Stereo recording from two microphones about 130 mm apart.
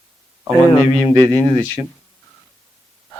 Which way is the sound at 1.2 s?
30° right (ahead or behind).